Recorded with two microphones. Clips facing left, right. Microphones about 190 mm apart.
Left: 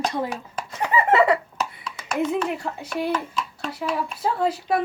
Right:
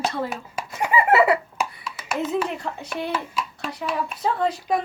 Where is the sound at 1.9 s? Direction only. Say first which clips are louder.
Right 1 dB; 5° right (ahead or behind).